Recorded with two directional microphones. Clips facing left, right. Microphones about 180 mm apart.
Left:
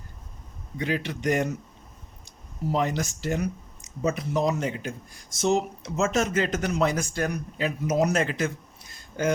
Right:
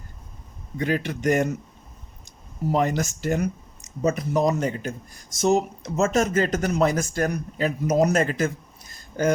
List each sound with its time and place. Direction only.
0.8 s speech: 50° right (ahead or behind)
2.7 s speech: 50° right (ahead or behind)